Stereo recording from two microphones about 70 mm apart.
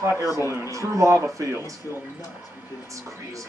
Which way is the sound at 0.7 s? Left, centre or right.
Right.